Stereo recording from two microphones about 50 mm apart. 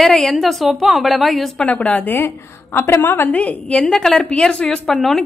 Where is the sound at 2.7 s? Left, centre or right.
Left.